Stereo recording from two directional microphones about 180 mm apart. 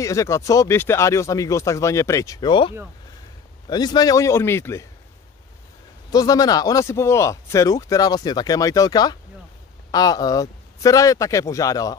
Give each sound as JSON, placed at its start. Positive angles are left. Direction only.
{"t": 0.0, "sound": "speech", "side_deg": 15}
{"t": 6.1, "sound": "speech", "side_deg": 20}